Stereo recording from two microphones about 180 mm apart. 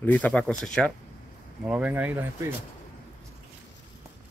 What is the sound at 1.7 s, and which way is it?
Speech, 10° right (ahead or behind).